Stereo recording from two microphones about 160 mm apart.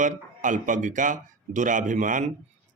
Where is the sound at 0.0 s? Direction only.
55° right (ahead or behind).